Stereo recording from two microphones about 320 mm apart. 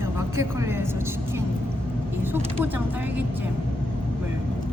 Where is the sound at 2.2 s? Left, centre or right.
Centre.